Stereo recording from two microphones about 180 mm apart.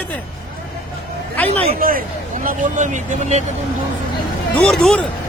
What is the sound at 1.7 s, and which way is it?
Speech, 50° right (ahead or behind).